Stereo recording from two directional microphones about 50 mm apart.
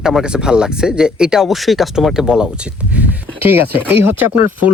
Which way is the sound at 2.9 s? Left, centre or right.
Right.